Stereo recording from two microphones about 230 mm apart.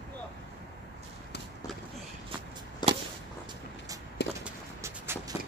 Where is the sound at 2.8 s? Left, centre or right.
Centre.